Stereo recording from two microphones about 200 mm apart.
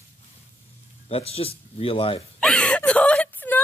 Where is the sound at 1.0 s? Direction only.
30° left (ahead or behind).